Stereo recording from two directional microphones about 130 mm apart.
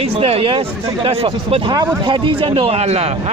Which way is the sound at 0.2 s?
45° right (ahead or behind).